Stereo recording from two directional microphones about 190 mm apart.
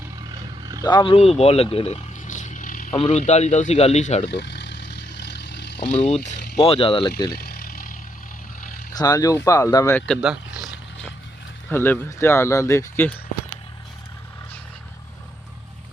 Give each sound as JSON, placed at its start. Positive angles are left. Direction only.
{"t": 0.8, "sound": "speech", "side_deg": 20}
{"t": 1.7, "sound": "a sound", "side_deg": 30}
{"t": 3.0, "sound": "speech", "side_deg": 35}
{"t": 4.3, "sound": "vehicle", "side_deg": 65}
{"t": 5.9, "sound": "speech", "side_deg": 35}
{"t": 7.3, "sound": "vehicle", "side_deg": 55}
{"t": 8.9, "sound": "speech", "side_deg": 20}
{"t": 10.1, "sound": "speech", "side_deg": 0}
{"t": 11.7, "sound": "speech", "side_deg": 10}